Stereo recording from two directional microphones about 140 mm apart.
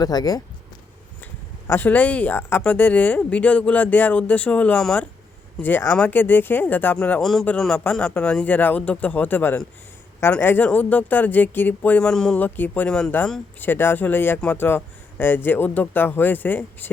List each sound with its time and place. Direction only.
0.0 s speech: 30° left (ahead or behind)
1.6 s speech: 15° left (ahead or behind)